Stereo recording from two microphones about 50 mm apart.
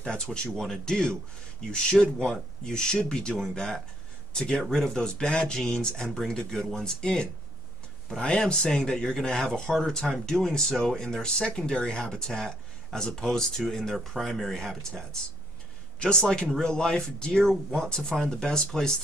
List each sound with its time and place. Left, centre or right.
0.0 s speech: centre